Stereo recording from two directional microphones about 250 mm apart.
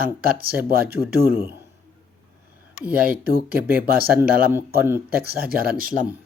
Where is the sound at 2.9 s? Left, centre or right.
Right.